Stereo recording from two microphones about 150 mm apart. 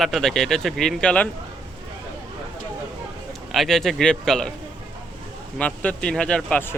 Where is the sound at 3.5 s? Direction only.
Centre (ahead or behind).